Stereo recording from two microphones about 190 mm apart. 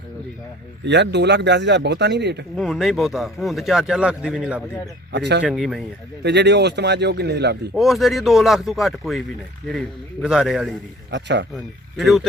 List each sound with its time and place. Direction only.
0.9 s speech: 65° right (ahead or behind)
2.6 s speech: centre (ahead or behind)
5.1 s speech: 65° right (ahead or behind)
5.4 s speech: centre (ahead or behind)
6.2 s speech: 65° right (ahead or behind)
7.8 s speech: centre (ahead or behind)
11.1 s speech: 65° right (ahead or behind)
11.5 s speech: centre (ahead or behind)